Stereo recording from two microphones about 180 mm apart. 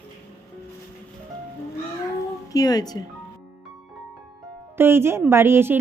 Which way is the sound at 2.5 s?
20° left (ahead or behind).